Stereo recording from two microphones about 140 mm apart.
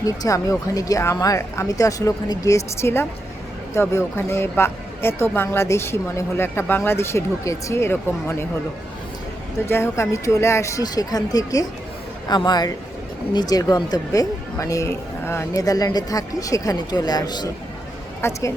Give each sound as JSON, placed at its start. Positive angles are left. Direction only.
{"t": 0.0, "sound": "speech", "side_deg": 25}
{"t": 9.6, "sound": "speech", "side_deg": 15}